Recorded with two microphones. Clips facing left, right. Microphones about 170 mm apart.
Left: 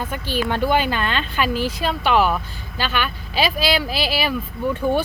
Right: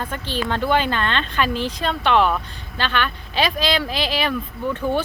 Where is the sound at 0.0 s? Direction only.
10° left (ahead or behind).